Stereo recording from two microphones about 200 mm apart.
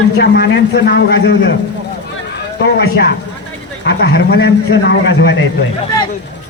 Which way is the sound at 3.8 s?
55° left (ahead or behind).